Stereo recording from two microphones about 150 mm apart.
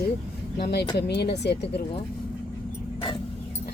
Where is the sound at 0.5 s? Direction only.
90° left.